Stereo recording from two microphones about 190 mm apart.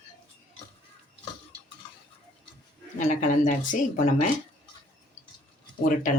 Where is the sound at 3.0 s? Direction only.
40° left (ahead or behind).